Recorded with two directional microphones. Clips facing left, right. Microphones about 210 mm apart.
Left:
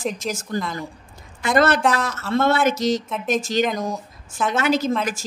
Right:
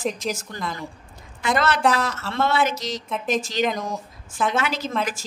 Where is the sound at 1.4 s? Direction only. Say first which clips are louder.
Left 4 dB; 45° left (ahead or behind).